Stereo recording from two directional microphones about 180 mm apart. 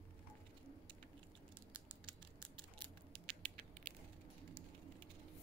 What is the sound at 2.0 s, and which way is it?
Crushing, 25° right (ahead or behind).